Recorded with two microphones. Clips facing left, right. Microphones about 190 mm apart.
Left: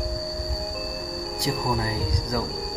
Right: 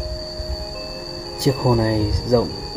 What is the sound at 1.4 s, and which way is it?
Speech, 30° right (ahead or behind).